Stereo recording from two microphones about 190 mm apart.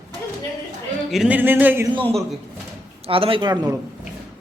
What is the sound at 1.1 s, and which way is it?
Speech, 5° right (ahead or behind).